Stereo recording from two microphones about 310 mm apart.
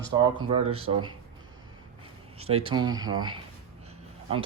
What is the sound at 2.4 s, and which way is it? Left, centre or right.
Speech, right.